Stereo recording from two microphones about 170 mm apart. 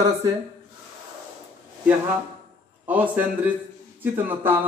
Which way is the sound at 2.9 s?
10° right (ahead or behind).